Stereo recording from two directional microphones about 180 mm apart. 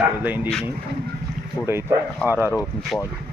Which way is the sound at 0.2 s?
10° right (ahead or behind).